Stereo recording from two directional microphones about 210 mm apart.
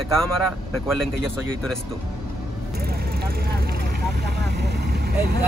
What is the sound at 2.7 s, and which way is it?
Vehicle, 45° right (ahead or behind).